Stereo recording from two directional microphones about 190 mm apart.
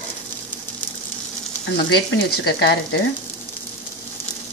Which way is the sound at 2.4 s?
60° left (ahead or behind).